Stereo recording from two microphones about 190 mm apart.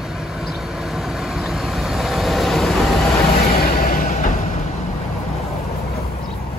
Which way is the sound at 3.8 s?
50° left (ahead or behind).